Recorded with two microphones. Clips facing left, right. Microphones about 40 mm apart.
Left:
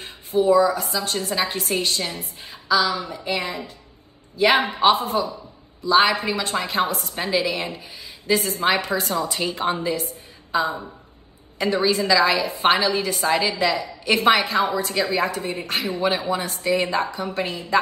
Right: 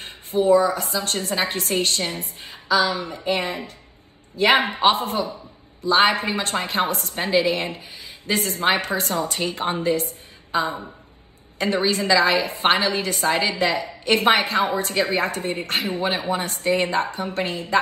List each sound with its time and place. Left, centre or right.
0.0 s a woman's voice: right